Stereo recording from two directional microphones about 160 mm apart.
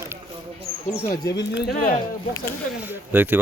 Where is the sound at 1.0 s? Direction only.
25° left (ahead or behind).